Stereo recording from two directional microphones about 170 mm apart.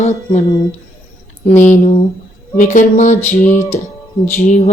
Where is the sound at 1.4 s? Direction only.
45° left (ahead or behind).